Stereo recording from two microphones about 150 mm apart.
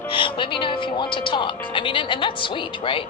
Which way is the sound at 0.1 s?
35° left (ahead or behind).